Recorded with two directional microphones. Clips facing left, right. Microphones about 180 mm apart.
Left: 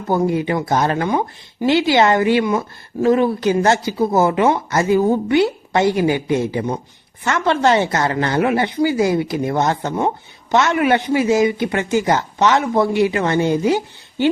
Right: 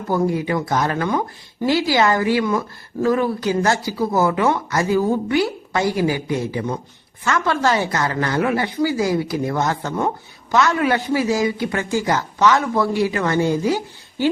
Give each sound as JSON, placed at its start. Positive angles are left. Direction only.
{"t": 0.1, "sound": "speech", "side_deg": 25}